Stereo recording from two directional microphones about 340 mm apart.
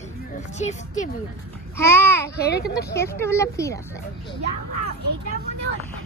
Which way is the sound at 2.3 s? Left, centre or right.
Left.